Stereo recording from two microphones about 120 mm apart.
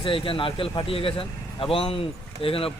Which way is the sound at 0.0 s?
50° left (ahead or behind).